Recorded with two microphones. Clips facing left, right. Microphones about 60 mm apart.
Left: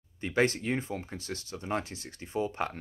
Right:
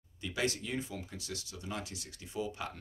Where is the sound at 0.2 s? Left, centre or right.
Left.